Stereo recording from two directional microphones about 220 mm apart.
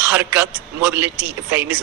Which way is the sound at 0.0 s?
5° right (ahead or behind).